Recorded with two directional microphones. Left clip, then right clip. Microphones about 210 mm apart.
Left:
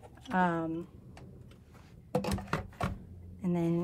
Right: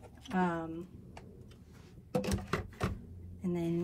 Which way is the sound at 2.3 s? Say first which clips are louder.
Left 1 dB; 30° left (ahead or behind).